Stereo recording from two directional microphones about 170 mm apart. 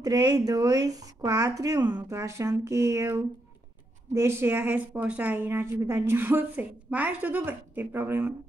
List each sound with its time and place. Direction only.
0.0 s a woman's voice: 20° right (ahead or behind)